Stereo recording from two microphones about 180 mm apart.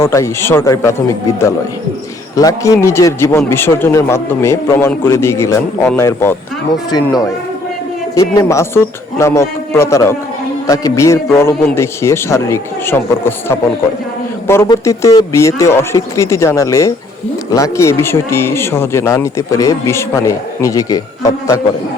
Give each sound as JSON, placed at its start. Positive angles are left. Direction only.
{"t": 0.0, "sound": "speech", "side_deg": 15}
{"t": 8.1, "sound": "a man's voice", "side_deg": 15}